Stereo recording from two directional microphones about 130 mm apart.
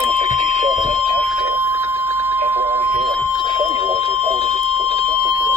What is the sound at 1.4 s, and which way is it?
Alarm clock, 20° right (ahead or behind).